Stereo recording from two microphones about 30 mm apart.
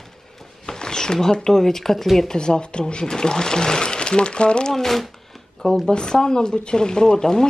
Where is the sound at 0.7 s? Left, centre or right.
Left.